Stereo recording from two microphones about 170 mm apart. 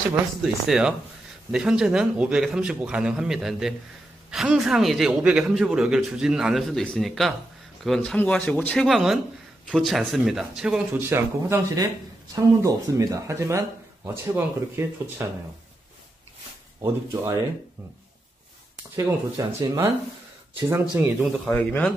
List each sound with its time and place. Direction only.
0.4 s a man's voice: 5° right (ahead or behind)
16.8 s speech: 15° right (ahead or behind)
18.9 s speech: 20° right (ahead or behind)
21.5 s a man's voice: 10° left (ahead or behind)